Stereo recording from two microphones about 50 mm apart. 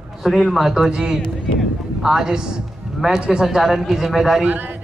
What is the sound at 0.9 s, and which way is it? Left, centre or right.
Speech, centre.